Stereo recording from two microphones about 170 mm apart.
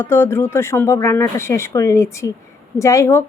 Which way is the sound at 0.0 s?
15° left (ahead or behind).